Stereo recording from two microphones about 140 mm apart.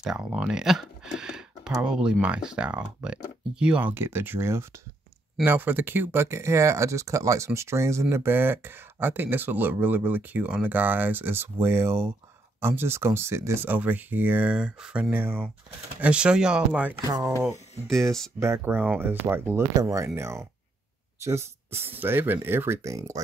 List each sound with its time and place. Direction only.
0.0 s speech: 5° right (ahead or behind)
18.4 s speech: 15° right (ahead or behind)